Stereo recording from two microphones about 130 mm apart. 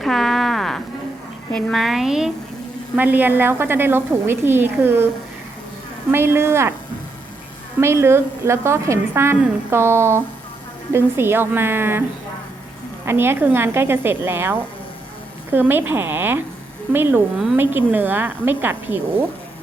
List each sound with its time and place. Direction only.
0.0 s a sound: centre (ahead or behind)
1.5 s a woman's voice: 5° left (ahead or behind); by 6.7 s 20° right (ahead or behind)
7.8 s a woman's voice: 20° right (ahead or behind)
13.1 s a woman's voice: 15° right (ahead or behind)